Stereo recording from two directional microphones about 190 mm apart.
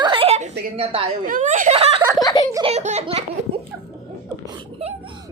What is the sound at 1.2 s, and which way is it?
Speech, 45° right (ahead or behind).